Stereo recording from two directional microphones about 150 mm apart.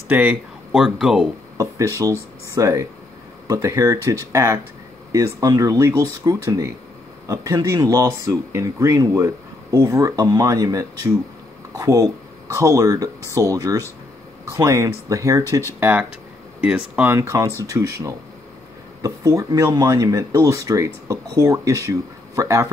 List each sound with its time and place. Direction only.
0.1 s speech: 5° right (ahead or behind)
2.0 s speech: 20° right (ahead or behind)
15.8 s speech: 10° right (ahead or behind)
17.0 s speech: 15° right (ahead or behind)